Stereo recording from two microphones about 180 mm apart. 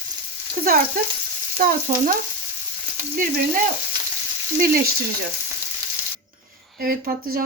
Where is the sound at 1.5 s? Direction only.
45° right (ahead or behind).